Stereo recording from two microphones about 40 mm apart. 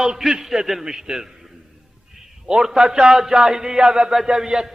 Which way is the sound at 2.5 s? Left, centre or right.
Centre.